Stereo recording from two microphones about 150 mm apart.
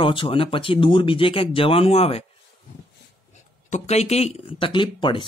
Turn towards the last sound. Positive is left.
turn(degrees=30)  # may be behind; listen again after turning